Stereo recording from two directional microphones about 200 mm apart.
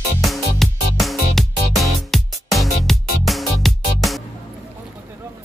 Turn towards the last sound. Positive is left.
turn(degrees=0)  # may be behind; listen again after turning